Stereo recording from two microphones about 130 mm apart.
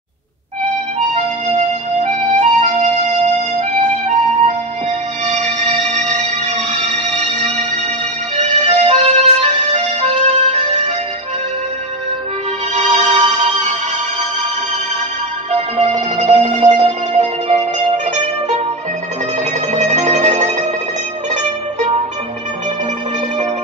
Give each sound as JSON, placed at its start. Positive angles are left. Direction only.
{"t": 2.0, "sound": "music", "side_deg": -65}
{"t": 5.3, "sound": "music", "side_deg": -60}
{"t": 8.4, "sound": "music", "side_deg": -55}
{"t": 12.7, "sound": "music", "side_deg": -60}
{"t": 15.5, "sound": "music", "side_deg": -55}
{"t": 19.7, "sound": "music", "side_deg": -65}